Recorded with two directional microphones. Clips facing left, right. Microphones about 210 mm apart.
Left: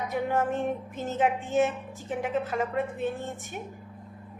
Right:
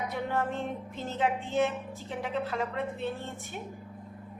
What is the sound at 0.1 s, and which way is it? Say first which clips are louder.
Speech: left 8 dB; 15° left (ahead or behind).